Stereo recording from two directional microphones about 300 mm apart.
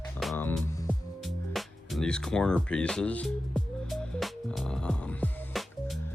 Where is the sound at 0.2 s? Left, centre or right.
Centre.